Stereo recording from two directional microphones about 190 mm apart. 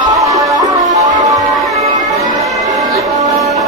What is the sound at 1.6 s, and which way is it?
Music, centre (ahead or behind).